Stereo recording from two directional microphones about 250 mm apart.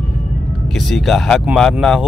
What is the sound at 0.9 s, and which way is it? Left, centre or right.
Speech, centre.